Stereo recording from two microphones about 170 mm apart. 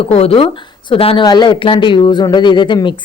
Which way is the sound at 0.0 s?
35° left (ahead or behind).